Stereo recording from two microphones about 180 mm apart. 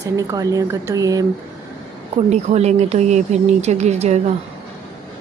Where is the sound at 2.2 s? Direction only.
35° right (ahead or behind).